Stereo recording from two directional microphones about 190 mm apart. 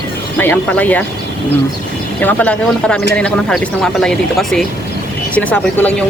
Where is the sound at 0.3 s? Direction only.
10° left (ahead or behind).